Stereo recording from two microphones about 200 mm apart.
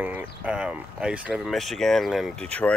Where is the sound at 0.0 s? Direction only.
5° right (ahead or behind).